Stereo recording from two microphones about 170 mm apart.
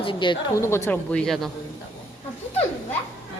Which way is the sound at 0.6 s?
15° left (ahead or behind).